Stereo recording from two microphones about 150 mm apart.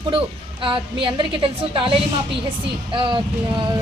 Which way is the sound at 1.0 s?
35° right (ahead or behind).